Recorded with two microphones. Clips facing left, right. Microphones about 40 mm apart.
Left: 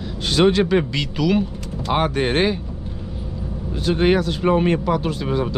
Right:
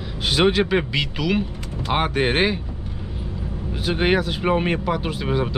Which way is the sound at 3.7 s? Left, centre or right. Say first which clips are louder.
Left 2 dB; centre.